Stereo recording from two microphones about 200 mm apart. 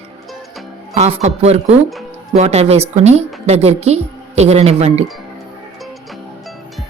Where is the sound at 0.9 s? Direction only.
35° right (ahead or behind).